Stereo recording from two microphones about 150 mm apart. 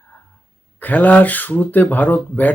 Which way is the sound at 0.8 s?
10° left (ahead or behind).